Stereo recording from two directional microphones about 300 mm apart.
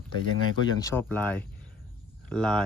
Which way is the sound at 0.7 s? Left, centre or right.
Centre.